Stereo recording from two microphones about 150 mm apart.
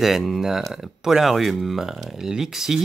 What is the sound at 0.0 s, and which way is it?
Speech, centre (ahead or behind).